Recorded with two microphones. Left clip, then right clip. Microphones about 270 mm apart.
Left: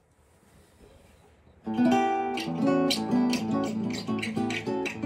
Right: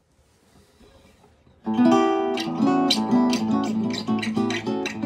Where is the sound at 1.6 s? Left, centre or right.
Right.